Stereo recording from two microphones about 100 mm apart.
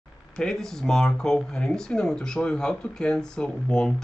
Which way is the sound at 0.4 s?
5° left (ahead or behind).